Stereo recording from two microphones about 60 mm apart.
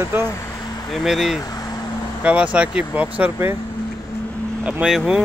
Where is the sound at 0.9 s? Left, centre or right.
Centre.